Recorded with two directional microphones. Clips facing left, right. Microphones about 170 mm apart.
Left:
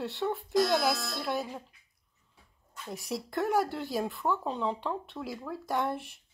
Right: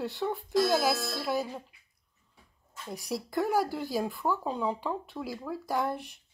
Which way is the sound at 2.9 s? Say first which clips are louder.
Right 2 dB; centre (ahead or behind).